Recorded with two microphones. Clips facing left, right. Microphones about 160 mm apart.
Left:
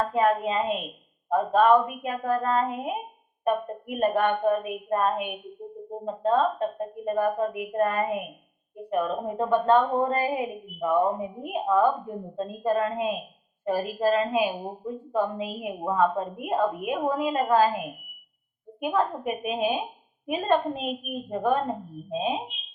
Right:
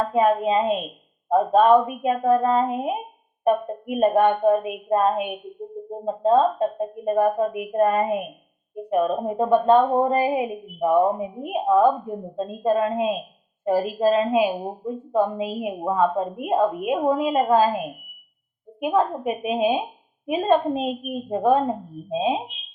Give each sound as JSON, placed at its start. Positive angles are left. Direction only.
{"t": 0.1, "sound": "a woman's voice", "side_deg": -25}